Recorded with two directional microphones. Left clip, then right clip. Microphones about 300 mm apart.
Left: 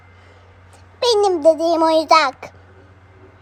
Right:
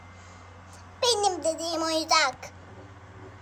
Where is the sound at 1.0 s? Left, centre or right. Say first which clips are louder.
Left 11 dB; centre.